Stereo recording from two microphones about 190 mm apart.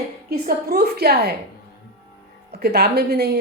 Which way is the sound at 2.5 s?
55° right (ahead or behind).